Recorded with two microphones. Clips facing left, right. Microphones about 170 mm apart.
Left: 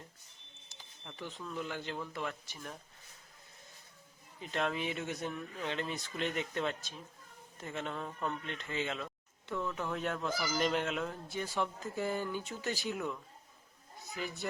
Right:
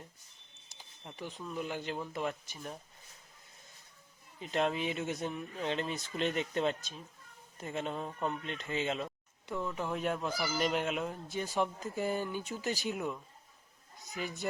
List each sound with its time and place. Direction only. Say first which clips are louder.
1.0 s speech: right 1 dB; 15° right (ahead or behind)
4.4 s speech: right 3 dB; 20° right (ahead or behind)
14.2 s speech: right 1 dB; 15° right (ahead or behind)